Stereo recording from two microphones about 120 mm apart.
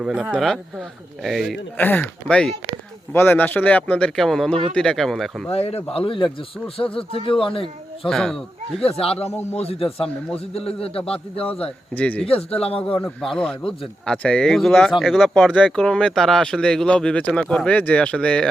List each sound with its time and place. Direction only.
0.0 s speech: centre (ahead or behind)
1.8 s speech: 15° left (ahead or behind)
5.5 s a man's voice: 55° left (ahead or behind)
8.0 s speech: 5° left (ahead or behind)
8.8 s a man's voice: 55° left (ahead or behind)
11.9 s speech: 15° left (ahead or behind)
12.2 s speech: 55° left (ahead or behind)
13.2 s speech: 5° left (ahead or behind)